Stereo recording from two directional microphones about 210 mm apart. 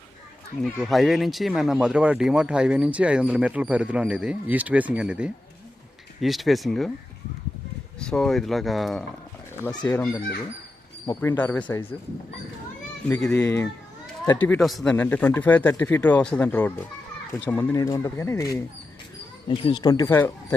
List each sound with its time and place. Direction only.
0.6 s speech: centre (ahead or behind)
7.9 s speech: 5° left (ahead or behind)
13.1 s speech: 5° left (ahead or behind)